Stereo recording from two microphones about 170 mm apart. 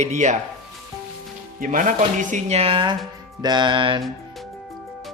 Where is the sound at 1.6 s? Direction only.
50° right (ahead or behind); by 2.9 s 30° right (ahead or behind).